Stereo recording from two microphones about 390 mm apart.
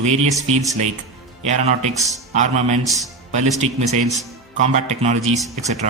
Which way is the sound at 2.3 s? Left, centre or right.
Centre.